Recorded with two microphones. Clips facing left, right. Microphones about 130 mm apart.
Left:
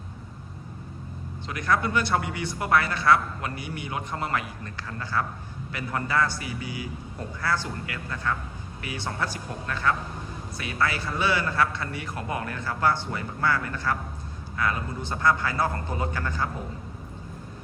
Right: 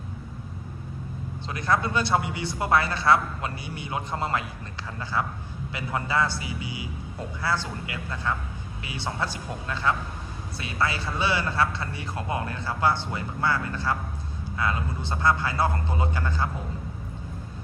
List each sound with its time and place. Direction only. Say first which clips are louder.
1.5 s a man's voice: even; 30° right (ahead or behind)